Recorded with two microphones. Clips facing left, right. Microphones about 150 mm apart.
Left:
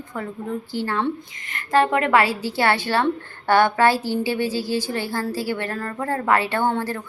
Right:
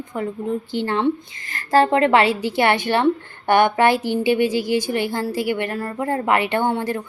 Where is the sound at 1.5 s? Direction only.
35° right (ahead or behind).